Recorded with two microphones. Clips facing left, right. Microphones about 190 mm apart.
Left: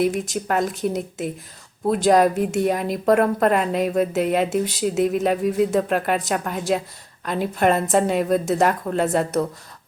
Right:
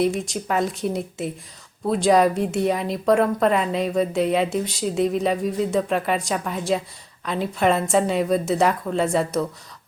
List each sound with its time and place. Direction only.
0.1 s speech: 5° left (ahead or behind)
3.4 s speech: 50° left (ahead or behind)
3.7 s speech: 5° left (ahead or behind)